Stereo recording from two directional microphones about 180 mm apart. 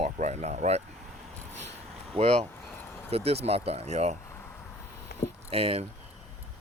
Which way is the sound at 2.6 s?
10° left (ahead or behind).